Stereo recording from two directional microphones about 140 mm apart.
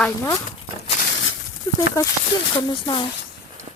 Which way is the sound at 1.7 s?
20° left (ahead or behind).